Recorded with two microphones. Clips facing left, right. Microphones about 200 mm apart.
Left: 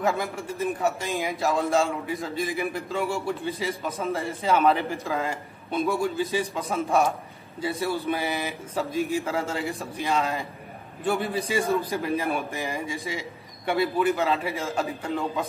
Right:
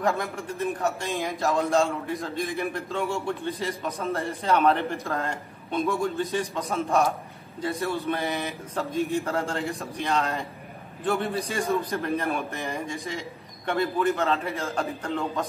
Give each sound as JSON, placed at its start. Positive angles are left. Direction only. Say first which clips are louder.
{"t": 0.0, "sound": "a man's voice", "louder": "even", "side_deg": 0}